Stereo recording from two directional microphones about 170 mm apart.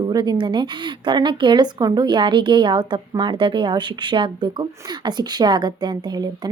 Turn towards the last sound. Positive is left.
turn(degrees=-25)  # may be behind; listen again after turning